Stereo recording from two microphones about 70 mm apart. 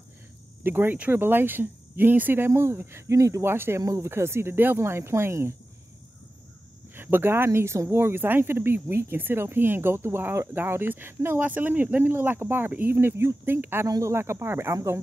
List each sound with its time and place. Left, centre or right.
0.7 s speech: right
3.4 s speech: right
3.8 s speech: right
4.1 s speech: right
7.0 s speech: right
13.8 s speech: right
14.1 s speech: right